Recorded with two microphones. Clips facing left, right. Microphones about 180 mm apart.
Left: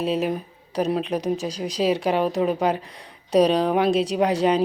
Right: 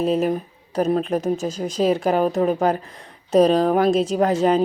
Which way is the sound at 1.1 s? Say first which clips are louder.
Right 3 dB; 45° right (ahead or behind).